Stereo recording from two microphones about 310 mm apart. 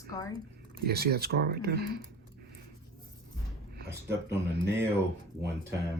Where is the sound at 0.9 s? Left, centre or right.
Right.